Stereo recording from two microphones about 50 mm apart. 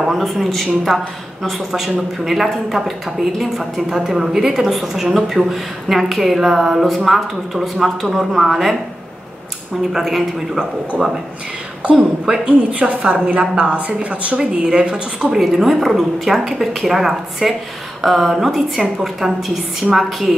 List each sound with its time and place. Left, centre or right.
0.0 s speech: centre
9.8 s speech: centre
10.9 s speech: centre
11.8 s a woman's voice: right
15.4 s speech: centre